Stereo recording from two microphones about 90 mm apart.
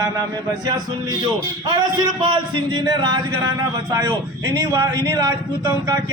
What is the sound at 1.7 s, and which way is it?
A man's voice, 55° right (ahead or behind).